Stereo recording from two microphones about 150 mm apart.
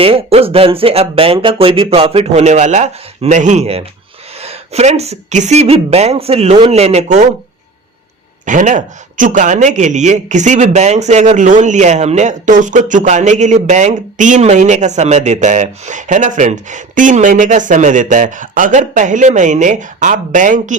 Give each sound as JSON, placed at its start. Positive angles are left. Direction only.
{"t": 0.0, "sound": "a man's voice", "side_deg": -40}
{"t": 8.4, "sound": "speech", "side_deg": -60}